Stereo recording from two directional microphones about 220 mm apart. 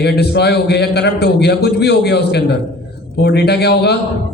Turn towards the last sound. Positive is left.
turn(degrees=50)  # may be behind; listen again after turning